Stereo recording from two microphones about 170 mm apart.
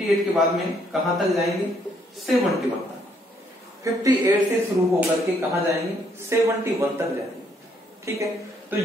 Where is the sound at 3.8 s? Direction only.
20° right (ahead or behind).